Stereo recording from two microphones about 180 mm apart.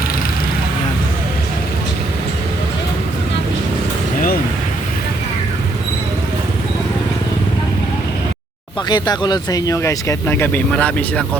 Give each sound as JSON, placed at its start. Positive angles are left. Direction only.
{"t": 8.9, "sound": "speech", "side_deg": 25}